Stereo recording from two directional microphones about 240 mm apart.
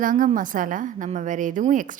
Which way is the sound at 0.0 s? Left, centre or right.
Right.